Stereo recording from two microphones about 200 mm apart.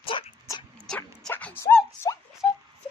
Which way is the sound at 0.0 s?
25° left (ahead or behind).